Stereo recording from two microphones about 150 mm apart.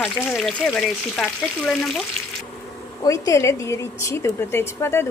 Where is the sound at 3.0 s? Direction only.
20° left (ahead or behind).